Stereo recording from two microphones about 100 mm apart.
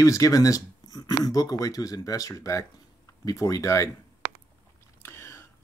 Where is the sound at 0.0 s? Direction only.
35° left (ahead or behind).